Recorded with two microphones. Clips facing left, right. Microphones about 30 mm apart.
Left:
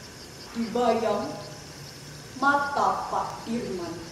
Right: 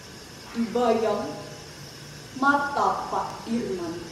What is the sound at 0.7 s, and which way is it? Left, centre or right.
Speech, centre.